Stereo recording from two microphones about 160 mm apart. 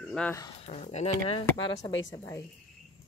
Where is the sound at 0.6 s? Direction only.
40° left (ahead or behind).